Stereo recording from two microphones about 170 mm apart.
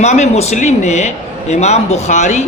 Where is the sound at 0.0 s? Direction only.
40° left (ahead or behind).